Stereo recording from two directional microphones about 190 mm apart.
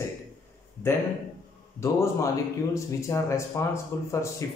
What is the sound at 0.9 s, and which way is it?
Speech, 15° left (ahead or behind).